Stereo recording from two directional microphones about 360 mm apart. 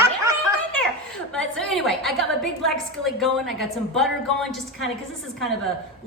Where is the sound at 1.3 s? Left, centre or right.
Centre.